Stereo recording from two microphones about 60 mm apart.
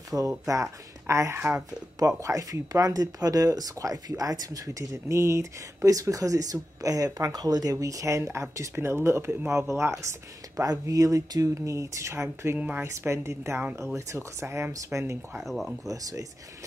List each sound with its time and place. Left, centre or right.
0.1 s speech: centre
0.5 s speech: right
1.7 s speech: right
4.9 s speech: right
8.2 s speech: right
10.5 s speech: right
12.5 s speech: right
12.8 s speech: right
15.4 s speech: centre
15.8 s speech: right